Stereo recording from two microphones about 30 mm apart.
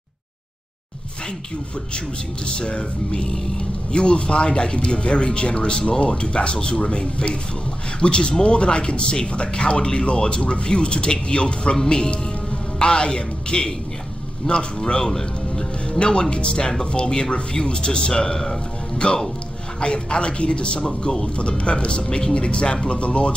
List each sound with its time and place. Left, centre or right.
2.4 s a man's voice: left; by 15.6 s centre
16.1 s speech: left
19.0 s speech: left
21.0 s speech: left
21.4 s speech: left